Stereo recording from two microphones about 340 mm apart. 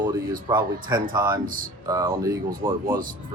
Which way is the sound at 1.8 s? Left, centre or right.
Centre.